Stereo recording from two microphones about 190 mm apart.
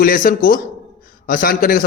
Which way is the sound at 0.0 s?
50° left (ahead or behind).